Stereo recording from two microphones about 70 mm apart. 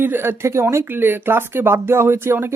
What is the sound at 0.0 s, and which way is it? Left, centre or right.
Speech, right.